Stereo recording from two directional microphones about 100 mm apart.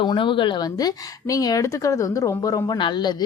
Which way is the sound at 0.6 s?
40° left (ahead or behind).